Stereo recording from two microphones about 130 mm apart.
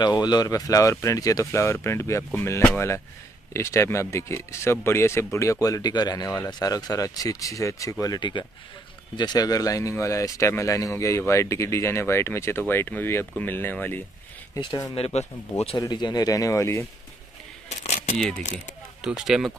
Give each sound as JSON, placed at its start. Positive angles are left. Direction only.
{"t": 0.0, "sound": "speech", "side_deg": 35}
{"t": 14.5, "sound": "speech", "side_deg": 35}
{"t": 15.0, "sound": "speech", "side_deg": 50}
{"t": 15.8, "sound": "speech", "side_deg": 30}
{"t": 17.6, "sound": "keys jangling", "side_deg": 60}
{"t": 18.9, "sound": "speech", "side_deg": -5}